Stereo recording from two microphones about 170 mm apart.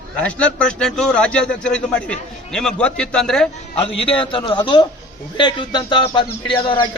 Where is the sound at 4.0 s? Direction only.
30° left (ahead or behind).